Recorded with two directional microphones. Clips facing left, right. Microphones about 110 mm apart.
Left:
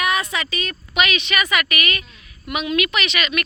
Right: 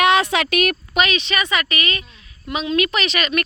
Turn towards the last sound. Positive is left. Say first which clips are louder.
# right 2 dB
turn(degrees=-35)  # may be behind; listen again after turning